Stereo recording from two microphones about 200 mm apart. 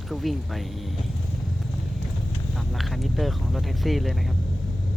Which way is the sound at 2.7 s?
Centre (ahead or behind).